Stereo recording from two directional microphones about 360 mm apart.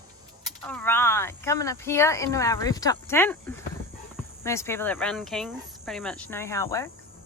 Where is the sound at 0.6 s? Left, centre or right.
Centre.